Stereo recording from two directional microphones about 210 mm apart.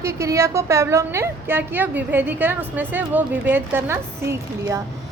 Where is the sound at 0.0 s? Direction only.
15° right (ahead or behind).